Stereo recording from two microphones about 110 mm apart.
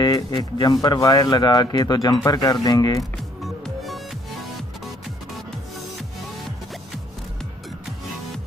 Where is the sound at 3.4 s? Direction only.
Centre (ahead or behind).